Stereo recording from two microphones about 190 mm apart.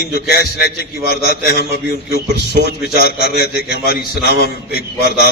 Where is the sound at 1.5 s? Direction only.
60° right (ahead or behind).